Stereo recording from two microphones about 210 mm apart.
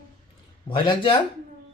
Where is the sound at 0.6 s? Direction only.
20° left (ahead or behind).